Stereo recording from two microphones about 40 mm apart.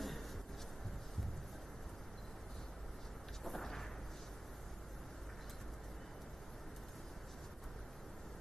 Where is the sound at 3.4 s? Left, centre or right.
Centre.